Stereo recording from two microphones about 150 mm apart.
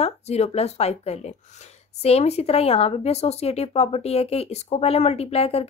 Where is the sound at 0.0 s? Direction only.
45° left (ahead or behind).